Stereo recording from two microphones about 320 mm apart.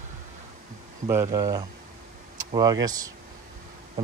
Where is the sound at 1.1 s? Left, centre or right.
Centre.